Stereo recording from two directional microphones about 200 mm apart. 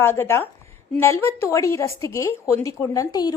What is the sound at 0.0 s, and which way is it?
A woman's voice, 10° left (ahead or behind).